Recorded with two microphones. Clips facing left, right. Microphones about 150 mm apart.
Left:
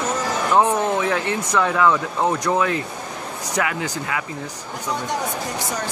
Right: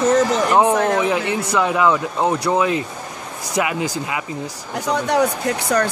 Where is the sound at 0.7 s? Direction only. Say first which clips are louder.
Right 3 dB; 85° right.